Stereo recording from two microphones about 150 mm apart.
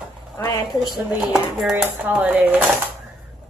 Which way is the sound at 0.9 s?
Centre (ahead or behind).